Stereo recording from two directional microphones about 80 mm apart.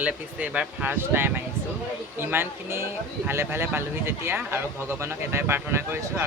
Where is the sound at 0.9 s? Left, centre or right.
Right.